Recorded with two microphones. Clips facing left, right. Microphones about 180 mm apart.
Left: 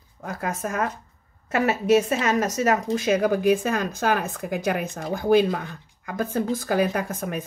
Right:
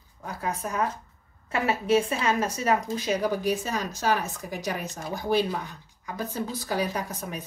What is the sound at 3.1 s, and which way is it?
Speech, 50° left (ahead or behind).